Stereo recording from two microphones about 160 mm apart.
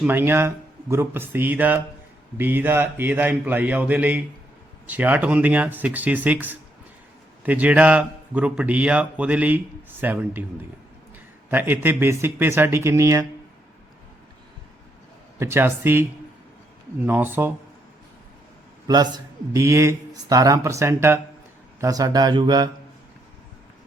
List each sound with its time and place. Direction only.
0.0 s a man's voice: 10° right (ahead or behind)
15.4 s a man's voice: 15° right (ahead or behind)
17.1 s a man's voice: 10° right (ahead or behind)
19.1 s speech: 20° right (ahead or behind)